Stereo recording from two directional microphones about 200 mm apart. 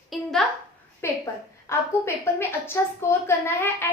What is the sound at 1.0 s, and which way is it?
A woman's voice, 10° left (ahead or behind).